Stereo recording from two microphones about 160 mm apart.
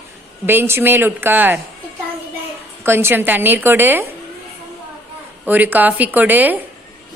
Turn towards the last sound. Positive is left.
turn(degrees=-10)  # may be behind; listen again after turning